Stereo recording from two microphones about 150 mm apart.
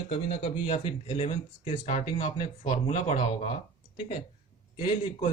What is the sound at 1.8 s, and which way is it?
Speech, 50° left (ahead or behind).